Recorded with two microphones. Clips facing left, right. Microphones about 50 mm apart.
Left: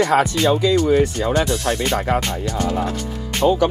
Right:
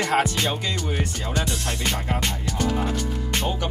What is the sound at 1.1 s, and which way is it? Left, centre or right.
Music, left.